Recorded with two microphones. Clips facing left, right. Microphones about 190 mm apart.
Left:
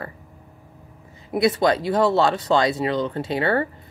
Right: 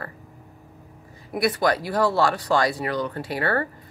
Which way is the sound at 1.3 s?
25° left (ahead or behind).